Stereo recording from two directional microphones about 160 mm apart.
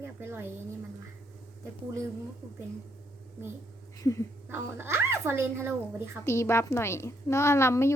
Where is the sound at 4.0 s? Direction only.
20° left (ahead or behind).